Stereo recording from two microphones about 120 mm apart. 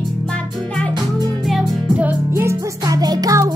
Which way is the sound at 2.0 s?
20° right (ahead or behind).